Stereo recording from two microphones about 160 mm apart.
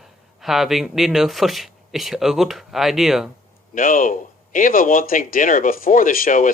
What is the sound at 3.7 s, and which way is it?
Speech, 55° left (ahead or behind).